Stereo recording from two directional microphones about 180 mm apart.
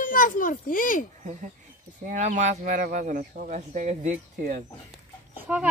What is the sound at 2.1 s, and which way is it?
Speech, 45° right (ahead or behind).